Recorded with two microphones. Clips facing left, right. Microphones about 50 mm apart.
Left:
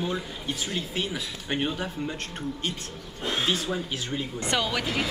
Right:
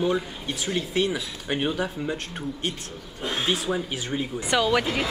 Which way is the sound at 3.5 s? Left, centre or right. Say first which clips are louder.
Right 2 dB; centre.